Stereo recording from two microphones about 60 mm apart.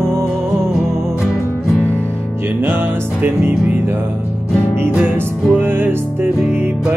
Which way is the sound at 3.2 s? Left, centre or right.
Right.